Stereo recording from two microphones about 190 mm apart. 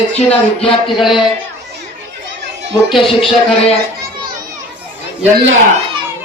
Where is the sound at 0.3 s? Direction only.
30° left (ahead or behind).